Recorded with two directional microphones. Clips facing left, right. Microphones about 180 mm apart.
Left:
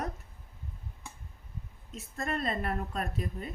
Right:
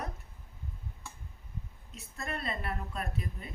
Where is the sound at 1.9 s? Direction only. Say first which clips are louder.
Left 5 dB; 45° left (ahead or behind).